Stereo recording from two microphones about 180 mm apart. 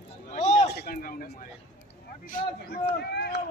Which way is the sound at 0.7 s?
60° left (ahead or behind).